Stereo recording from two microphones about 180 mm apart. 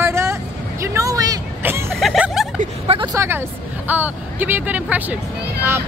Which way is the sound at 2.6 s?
35° right (ahead or behind).